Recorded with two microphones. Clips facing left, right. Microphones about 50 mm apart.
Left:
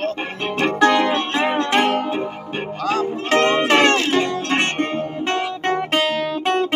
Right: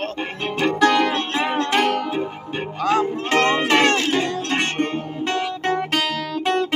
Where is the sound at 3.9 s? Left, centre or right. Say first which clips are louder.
Left 2 dB; left.